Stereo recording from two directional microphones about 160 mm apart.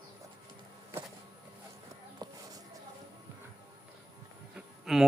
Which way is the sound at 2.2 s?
25° right (ahead or behind).